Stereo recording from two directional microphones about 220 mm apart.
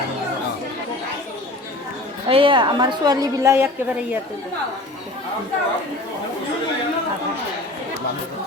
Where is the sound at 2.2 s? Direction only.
25° right (ahead or behind).